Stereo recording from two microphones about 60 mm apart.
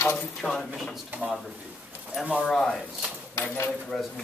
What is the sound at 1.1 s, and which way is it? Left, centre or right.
Speech, right.